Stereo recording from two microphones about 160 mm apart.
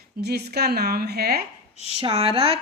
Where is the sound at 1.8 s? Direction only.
40° left (ahead or behind).